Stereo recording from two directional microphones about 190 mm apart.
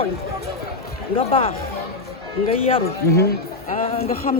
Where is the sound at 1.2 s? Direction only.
30° left (ahead or behind).